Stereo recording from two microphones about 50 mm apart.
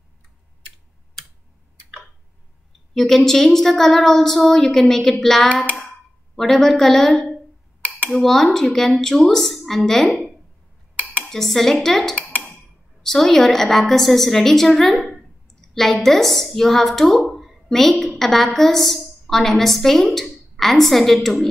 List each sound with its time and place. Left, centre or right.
2.9 s speech: centre
11.2 s speech: centre
12.2 s a sound: left
13.0 s a woman's voice: centre